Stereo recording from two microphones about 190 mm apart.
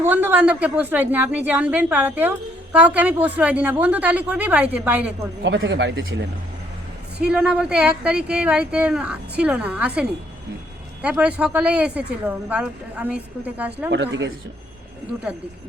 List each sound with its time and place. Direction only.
0.0 s speech: 10° right (ahead or behind)
5.4 s speech: 75° right (ahead or behind)
7.2 s speech: 5° right (ahead or behind)
13.9 s speech: 70° right (ahead or behind)